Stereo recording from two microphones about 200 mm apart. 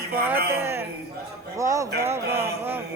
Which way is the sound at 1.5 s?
15° right (ahead or behind).